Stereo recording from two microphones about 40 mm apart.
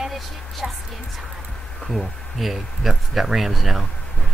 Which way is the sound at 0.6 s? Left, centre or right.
Centre.